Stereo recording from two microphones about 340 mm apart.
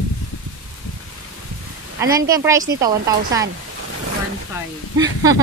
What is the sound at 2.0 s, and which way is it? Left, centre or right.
A woman's voice, centre.